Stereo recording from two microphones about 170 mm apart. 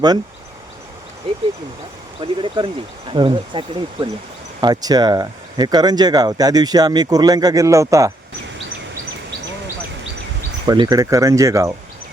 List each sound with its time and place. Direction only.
1.2 s speech: 30° right (ahead or behind)
10.7 s speech: 25° right (ahead or behind)